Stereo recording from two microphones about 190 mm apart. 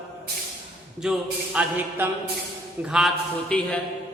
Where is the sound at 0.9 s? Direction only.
5° right (ahead or behind).